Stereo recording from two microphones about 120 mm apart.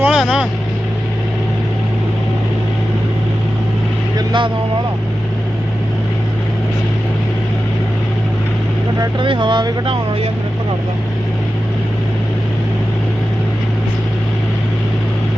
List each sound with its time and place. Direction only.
0.0 s vehicle: 5° right (ahead or behind)
4.3 s vehicle: 45° right (ahead or behind)
9.1 s speech: 45° right (ahead or behind)